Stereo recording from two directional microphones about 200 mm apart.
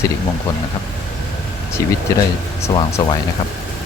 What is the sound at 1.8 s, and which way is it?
Speech, 15° left (ahead or behind).